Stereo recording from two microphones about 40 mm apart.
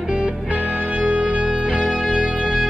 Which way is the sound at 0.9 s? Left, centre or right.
Right.